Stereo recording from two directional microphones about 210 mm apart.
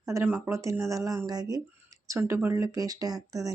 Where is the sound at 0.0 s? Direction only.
15° right (ahead or behind).